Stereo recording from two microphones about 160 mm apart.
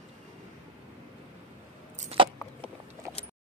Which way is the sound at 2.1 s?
35° right (ahead or behind).